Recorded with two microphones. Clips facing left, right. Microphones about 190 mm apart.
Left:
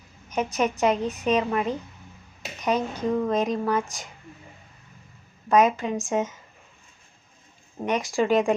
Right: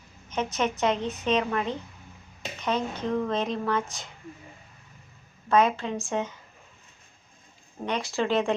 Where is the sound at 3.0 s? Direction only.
10° left (ahead or behind).